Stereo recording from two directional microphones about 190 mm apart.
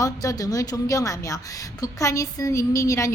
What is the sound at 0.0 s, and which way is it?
A woman's voice, 20° left (ahead or behind).